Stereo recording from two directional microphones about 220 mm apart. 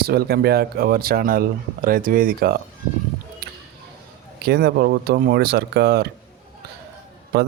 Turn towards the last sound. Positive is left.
turn(degrees=-45)  # may be behind; listen again after turning